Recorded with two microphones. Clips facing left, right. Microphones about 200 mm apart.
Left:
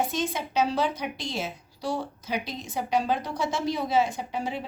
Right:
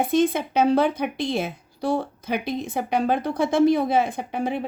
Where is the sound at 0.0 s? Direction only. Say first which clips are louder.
Right 8 dB; 55° right (ahead or behind).